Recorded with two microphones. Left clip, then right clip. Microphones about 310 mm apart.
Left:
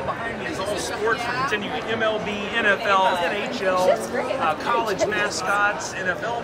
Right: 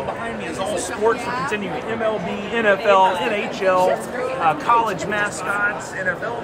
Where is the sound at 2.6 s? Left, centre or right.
Right.